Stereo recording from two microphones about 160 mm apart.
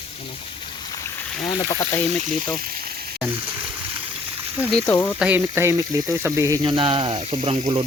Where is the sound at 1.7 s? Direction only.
20° left (ahead or behind).